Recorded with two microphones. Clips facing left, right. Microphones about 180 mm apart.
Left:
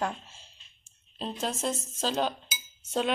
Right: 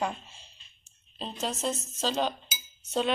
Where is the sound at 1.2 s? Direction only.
10° left (ahead or behind).